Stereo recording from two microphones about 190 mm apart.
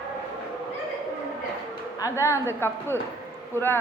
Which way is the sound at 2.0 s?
15° left (ahead or behind).